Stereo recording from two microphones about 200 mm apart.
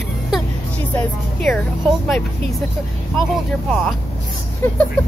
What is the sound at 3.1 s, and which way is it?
Speech, centre (ahead or behind).